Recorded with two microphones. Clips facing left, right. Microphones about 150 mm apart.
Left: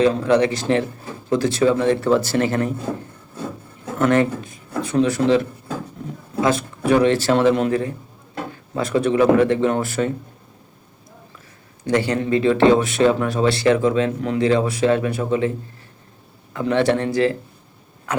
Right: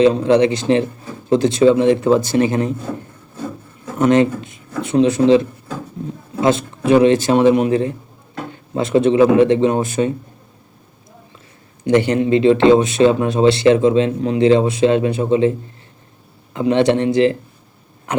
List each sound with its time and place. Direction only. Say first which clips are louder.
0.0 s speech: right 4 dB; 20° right (ahead or behind)
3.9 s speech: right 4 dB; 20° right (ahead or behind)
11.9 s speech: right 5 dB; 25° right (ahead or behind)